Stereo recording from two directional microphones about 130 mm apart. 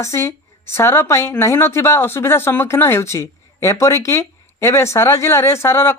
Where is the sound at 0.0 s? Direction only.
20° left (ahead or behind).